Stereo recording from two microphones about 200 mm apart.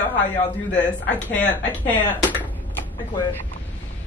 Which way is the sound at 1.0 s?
10° left (ahead or behind).